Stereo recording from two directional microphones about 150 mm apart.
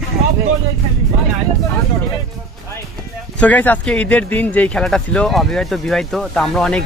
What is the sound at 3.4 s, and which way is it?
Speech, 10° left (ahead or behind).